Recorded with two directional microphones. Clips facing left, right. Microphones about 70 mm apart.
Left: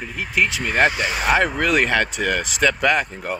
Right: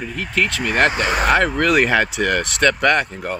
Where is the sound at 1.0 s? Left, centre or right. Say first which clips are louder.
Right 4 dB; right.